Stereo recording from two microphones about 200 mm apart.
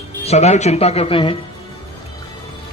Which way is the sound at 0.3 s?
35° left (ahead or behind).